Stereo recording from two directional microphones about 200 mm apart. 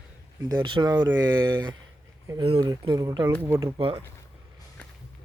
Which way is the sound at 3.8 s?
30° right (ahead or behind).